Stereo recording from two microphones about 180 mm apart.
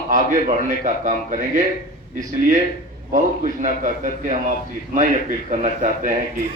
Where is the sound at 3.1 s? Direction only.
45° right (ahead or behind).